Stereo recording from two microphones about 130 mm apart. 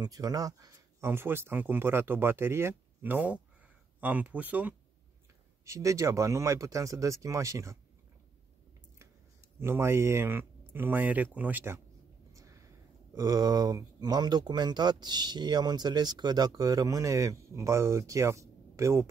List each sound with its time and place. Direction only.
0.0 s speech: 30° right (ahead or behind); by 4.7 s 10° right (ahead or behind)
5.7 s speech: 25° right (ahead or behind)
9.6 s speech: 20° right (ahead or behind)
12.4 s a sound: 25° right (ahead or behind)
13.1 s speech: 30° right (ahead or behind)